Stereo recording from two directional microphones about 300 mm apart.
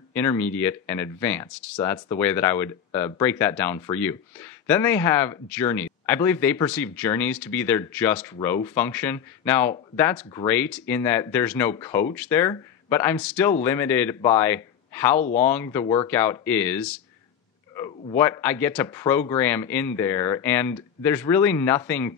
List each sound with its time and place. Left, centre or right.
0.1 s speech: centre
15.1 s speech: left
15.4 s speech: centre